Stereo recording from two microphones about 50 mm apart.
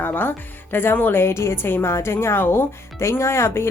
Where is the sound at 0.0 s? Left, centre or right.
Left.